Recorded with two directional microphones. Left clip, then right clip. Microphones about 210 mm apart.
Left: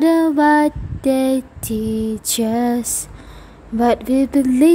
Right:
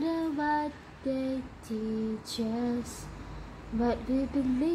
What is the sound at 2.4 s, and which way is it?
Female singing, 50° left (ahead or behind).